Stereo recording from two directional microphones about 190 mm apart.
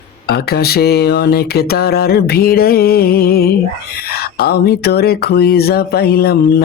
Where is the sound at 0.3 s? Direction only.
55° left (ahead or behind).